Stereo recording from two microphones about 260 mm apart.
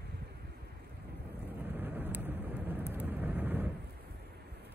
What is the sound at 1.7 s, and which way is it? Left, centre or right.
Vehicle, centre.